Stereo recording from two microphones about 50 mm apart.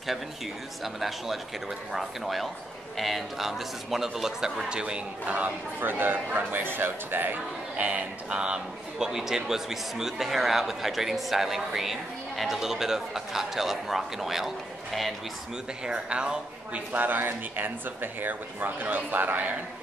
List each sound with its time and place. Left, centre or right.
0.8 s a man's voice: centre
5.2 s speech: right
7.7 s speech: right
8.9 s a man's voice: centre
15.8 s speech: centre
16.9 s speech: right